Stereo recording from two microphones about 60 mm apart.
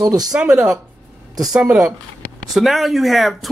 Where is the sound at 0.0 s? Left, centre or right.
Right.